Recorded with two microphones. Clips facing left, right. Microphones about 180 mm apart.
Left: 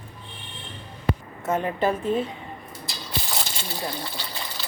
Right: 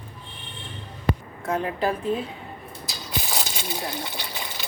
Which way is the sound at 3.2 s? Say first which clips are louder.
Right 1 dB; 15° right (ahead or behind).